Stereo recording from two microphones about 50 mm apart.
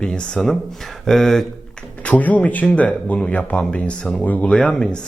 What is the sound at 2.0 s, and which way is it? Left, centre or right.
Speech, left.